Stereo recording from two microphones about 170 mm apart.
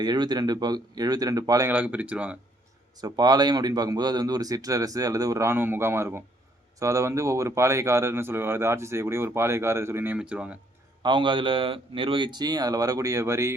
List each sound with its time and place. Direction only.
0.0 s speech: 25° right (ahead or behind)
1.7 s speech: 10° right (ahead or behind)
2.9 s speech: 25° right (ahead or behind); by 10.6 s 5° right (ahead or behind)
11.0 s speech: 30° right (ahead or behind)